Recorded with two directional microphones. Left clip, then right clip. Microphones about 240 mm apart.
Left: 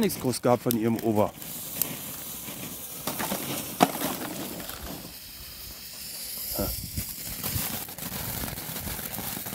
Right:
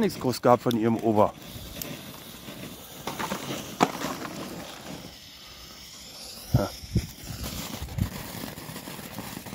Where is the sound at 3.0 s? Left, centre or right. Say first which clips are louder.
Even; left.